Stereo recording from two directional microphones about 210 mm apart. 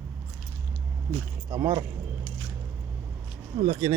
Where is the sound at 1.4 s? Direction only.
20° right (ahead or behind).